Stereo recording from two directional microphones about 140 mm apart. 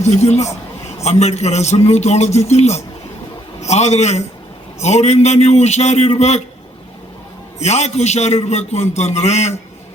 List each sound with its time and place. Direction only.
0.0 s a man's voice: 55° left (ahead or behind)
7.6 s a man's voice: 55° left (ahead or behind)